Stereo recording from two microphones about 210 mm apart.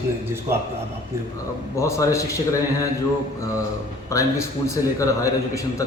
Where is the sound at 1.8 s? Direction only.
15° left (ahead or behind).